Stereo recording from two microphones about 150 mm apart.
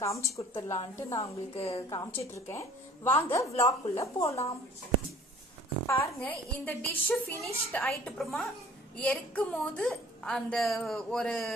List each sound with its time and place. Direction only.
0.1 s a woman's voice: 20° left (ahead or behind)
1.5 s a woman's voice: 45° left (ahead or behind)
1.9 s a woman's voice: 20° left (ahead or behind)
5.9 s a woman's voice: 10° left (ahead or behind)